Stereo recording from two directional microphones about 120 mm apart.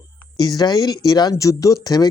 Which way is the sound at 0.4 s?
35° left (ahead or behind).